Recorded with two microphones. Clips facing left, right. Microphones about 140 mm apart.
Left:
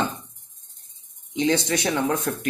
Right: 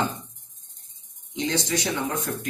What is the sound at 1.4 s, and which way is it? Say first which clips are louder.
Speech: left 4 dB; 60° left (ahead or behind).